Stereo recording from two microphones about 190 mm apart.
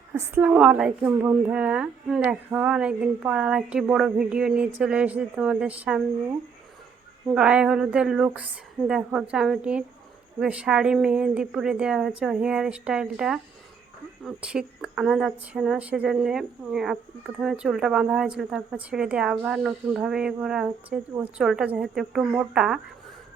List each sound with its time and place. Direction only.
0.1 s speech: 10° right (ahead or behind)
7.3 s speech: 5° right (ahead or behind)